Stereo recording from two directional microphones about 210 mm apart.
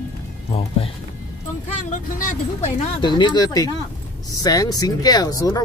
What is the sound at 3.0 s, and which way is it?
Speech, 20° left (ahead or behind).